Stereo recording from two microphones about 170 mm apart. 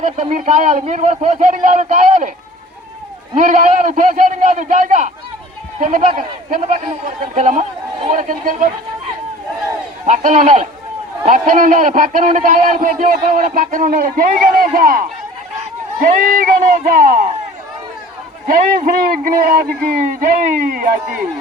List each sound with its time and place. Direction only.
0.0 s speech: 45° right (ahead or behind)
3.3 s speech: 50° right (ahead or behind)
10.1 s a man's voice: 50° right (ahead or behind)
18.4 s a man's voice: 55° right (ahead or behind)